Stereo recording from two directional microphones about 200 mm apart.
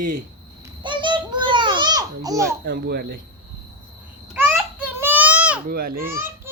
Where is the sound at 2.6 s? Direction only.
50° right (ahead or behind).